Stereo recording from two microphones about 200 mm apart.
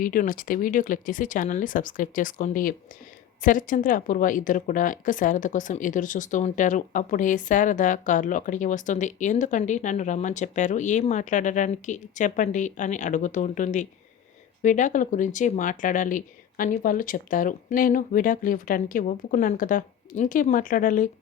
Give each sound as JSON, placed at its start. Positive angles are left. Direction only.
{"t": 0.0, "sound": "a woman's voice", "side_deg": 45}